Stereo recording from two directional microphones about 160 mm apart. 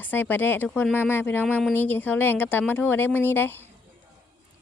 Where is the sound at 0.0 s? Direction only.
10° left (ahead or behind).